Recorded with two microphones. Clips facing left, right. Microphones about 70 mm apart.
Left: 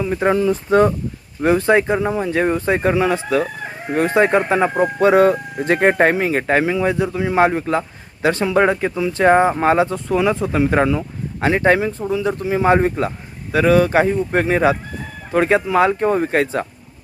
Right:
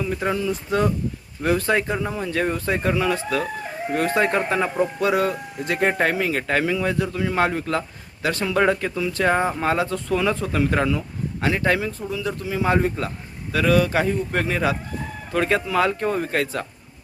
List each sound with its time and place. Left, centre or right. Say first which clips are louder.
0.0 s speech: left 5 dB; left
0.3 s speech: left 10 dB; left